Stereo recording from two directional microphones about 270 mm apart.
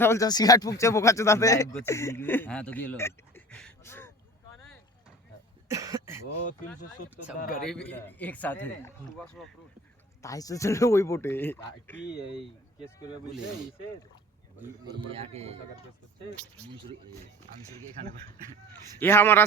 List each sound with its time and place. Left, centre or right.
0.0 s speech: centre
5.6 s cough: centre
7.3 s speech: left
7.7 s a man's voice: centre
10.2 s a man's voice: centre
14.6 s a man's voice: centre
16.6 s a man's voice: centre
18.9 s speech: centre